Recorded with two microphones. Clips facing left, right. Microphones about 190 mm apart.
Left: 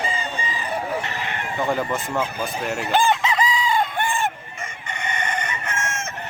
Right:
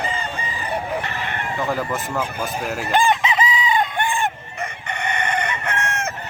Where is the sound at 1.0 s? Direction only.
55° right (ahead or behind).